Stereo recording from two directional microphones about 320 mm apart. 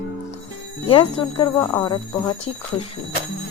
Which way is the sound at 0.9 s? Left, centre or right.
Centre.